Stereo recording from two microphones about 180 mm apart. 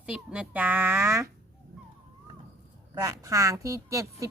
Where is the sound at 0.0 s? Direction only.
5° right (ahead or behind).